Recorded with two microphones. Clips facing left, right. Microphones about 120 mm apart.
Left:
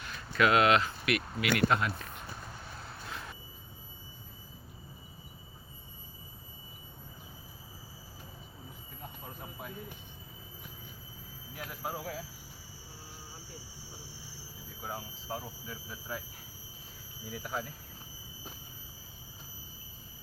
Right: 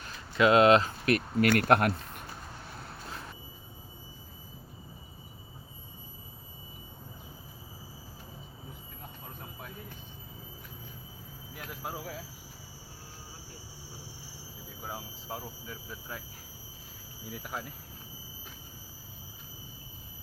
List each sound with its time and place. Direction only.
0.3 s speech: 25° right (ahead or behind); by 2.2 s 60° right (ahead or behind)
9.4 s vehicle: 5° left (ahead or behind)
11.5 s a sound: centre (ahead or behind)
14.8 s squeal: centre (ahead or behind)
17.3 s insect: centre (ahead or behind)